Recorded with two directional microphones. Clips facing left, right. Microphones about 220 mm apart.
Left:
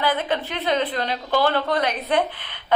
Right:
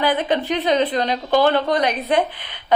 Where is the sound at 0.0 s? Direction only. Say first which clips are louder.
Right 4 dB; 15° right (ahead or behind).